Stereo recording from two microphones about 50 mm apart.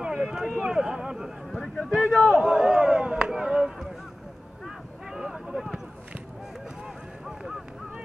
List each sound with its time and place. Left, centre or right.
0.0 s speech: centre
1.5 s a man's voice: centre
2.4 s chop: centre
4.6 s vehicle: centre
7.2 s honk: centre